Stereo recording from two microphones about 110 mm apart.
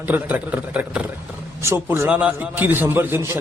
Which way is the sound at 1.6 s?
25° right (ahead or behind).